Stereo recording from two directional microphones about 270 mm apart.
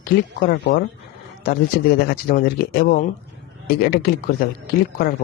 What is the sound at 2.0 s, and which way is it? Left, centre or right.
Speech, left.